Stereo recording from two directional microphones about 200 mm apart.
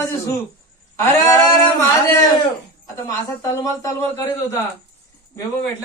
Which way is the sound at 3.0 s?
15° left (ahead or behind).